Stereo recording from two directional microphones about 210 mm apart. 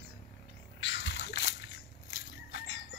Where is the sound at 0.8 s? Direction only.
60° left (ahead or behind).